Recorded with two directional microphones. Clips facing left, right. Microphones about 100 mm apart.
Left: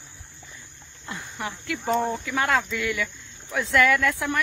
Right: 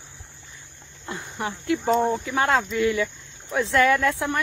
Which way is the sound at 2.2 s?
30° right (ahead or behind).